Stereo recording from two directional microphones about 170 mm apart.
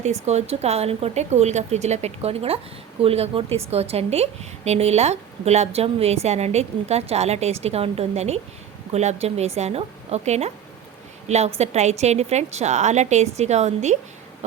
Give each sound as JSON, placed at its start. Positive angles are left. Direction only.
{"t": 0.0, "sound": "a woman's voice", "side_deg": -40}